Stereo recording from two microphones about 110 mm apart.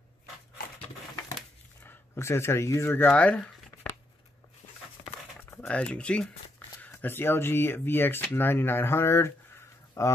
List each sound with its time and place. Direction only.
1.8 s speech: 20° left (ahead or behind)
5.7 s speech: 10° left (ahead or behind); by 10.1 s 25° left (ahead or behind)